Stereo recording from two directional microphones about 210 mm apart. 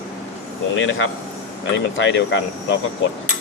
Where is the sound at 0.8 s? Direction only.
65° left (ahead or behind).